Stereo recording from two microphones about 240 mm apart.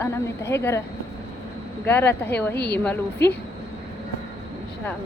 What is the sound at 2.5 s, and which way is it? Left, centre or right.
Speech, left.